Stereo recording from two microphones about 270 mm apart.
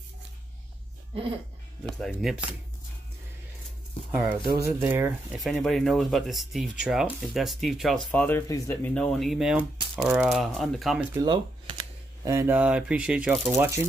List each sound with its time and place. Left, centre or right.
2.0 s speech: centre
4.1 s speech: centre
11.1 s speech: centre